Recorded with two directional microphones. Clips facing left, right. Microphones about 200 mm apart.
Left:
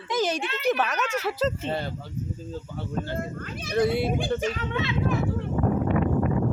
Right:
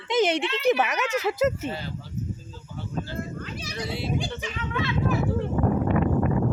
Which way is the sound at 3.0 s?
55° left (ahead or behind).